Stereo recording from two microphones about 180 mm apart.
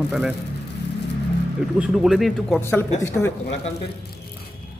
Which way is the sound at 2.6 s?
10° left (ahead or behind).